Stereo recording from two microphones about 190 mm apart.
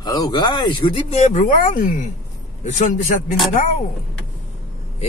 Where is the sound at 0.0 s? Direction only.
20° left (ahead or behind); by 3.2 s 40° left (ahead or behind).